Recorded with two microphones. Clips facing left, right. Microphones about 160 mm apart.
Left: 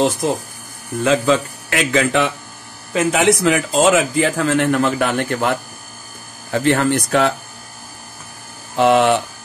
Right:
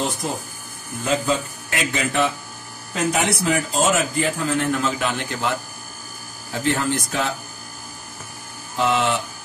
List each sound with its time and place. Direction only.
1.0 s a man's voice: 90° left; by 5.6 s 55° left (ahead or behind)
6.5 s speech: 70° left (ahead or behind)
8.7 s speech: 65° left (ahead or behind)